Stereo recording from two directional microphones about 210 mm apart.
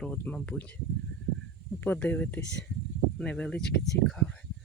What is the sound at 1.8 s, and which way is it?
Speech, 10° left (ahead or behind).